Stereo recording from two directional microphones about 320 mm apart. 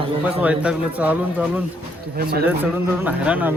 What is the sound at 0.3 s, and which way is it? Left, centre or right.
Speech, centre.